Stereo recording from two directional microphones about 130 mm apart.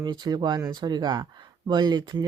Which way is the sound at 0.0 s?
35° right (ahead or behind).